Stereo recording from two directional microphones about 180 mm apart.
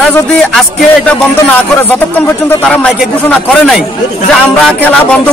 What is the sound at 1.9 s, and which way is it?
Speech, 10° left (ahead or behind).